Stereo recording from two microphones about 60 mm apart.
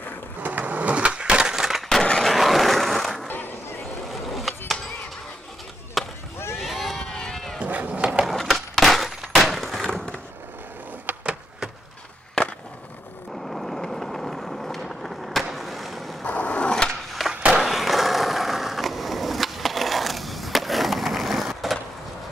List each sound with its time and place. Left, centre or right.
0.4 s skateboard: right; by 3.3 s centre
3.3 s skateboard: left
4.1 s skateboard: centre
6.0 s skateboard: centre
6.5 s a sound: centre
7.5 s cat: right
8.3 s a sound: centre
11.1 s a sound: right
13.3 s vehicle: centre
15.5 s skateboard: centre
16.3 s a sound: left
17.5 s skateboard: centre